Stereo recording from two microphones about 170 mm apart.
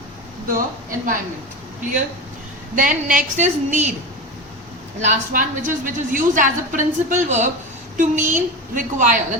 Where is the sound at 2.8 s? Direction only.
50° right (ahead or behind).